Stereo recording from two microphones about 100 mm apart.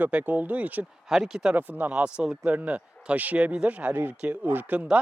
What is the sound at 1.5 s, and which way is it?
Speech, 20° right (ahead or behind).